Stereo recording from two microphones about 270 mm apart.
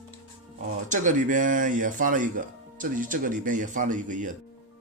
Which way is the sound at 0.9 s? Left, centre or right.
Right.